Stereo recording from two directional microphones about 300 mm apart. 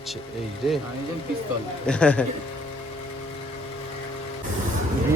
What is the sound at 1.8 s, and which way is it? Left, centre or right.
Speech, centre.